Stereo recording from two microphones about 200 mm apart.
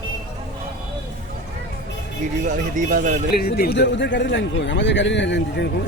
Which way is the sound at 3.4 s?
50° left (ahead or behind).